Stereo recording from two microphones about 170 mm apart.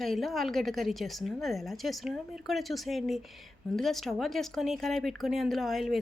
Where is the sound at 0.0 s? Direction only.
Centre (ahead or behind).